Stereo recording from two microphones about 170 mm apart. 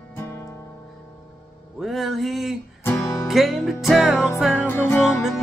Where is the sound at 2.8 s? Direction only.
15° left (ahead or behind).